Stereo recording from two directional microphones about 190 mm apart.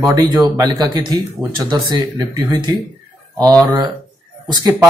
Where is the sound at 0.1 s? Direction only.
20° right (ahead or behind).